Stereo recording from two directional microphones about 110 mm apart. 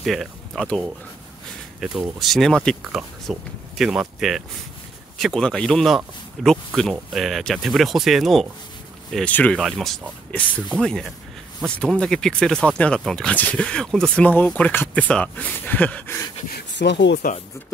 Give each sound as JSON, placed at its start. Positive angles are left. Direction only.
{"t": 0.0, "sound": "speech", "side_deg": 0}
{"t": 1.8, "sound": "speech", "side_deg": -5}
{"t": 9.1, "sound": "speech", "side_deg": 10}
{"t": 9.6, "sound": "speech", "side_deg": 0}
{"t": 10.4, "sound": "speech", "side_deg": 15}